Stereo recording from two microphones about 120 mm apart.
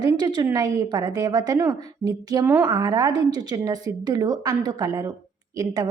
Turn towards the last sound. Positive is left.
turn(degrees=-35)  # may be behind; listen again after turning